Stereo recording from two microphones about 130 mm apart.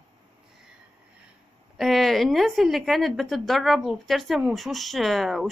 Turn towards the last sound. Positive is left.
turn(degrees=0)  # may be behind; listen again after turning